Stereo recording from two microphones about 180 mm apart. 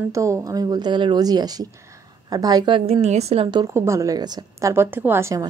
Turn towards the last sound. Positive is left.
turn(degrees=-15)  # may be behind; listen again after turning